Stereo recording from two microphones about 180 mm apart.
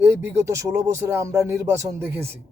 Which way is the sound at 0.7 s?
15° right (ahead or behind).